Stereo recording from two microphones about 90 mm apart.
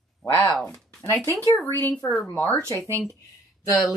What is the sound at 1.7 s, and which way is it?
Speech, 20° left (ahead or behind).